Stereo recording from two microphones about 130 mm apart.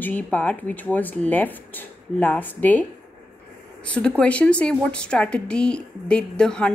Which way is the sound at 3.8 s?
10° left (ahead or behind).